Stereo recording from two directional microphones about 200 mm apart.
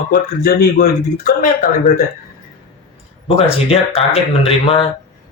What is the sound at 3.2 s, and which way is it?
Speech, 30° left (ahead or behind).